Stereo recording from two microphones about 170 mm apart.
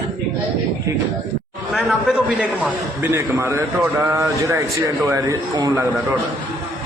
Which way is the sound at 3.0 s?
15° right (ahead or behind).